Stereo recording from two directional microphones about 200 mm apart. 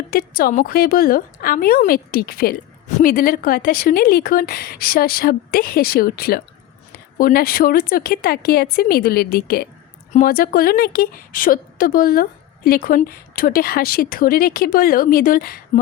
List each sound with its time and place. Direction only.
0.1 s a woman's voice: 45° left (ahead or behind)